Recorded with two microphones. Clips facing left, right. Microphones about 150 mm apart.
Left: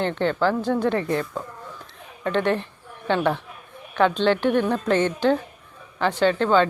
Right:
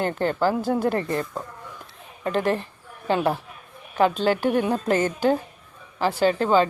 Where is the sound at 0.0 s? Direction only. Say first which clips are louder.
Left 1 dB; 5° right (ahead or behind).